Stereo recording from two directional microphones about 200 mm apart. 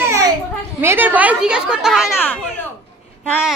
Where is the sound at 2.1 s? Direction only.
10° left (ahead or behind).